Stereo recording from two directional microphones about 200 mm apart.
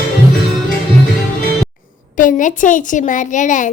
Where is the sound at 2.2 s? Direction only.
40° left (ahead or behind).